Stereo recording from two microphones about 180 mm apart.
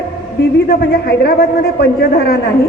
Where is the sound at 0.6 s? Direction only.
60° left (ahead or behind).